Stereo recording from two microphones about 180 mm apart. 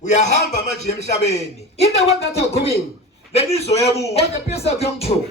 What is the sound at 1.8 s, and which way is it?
Speech, 35° left (ahead or behind).